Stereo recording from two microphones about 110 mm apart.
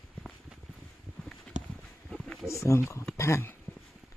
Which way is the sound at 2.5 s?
25° left (ahead or behind).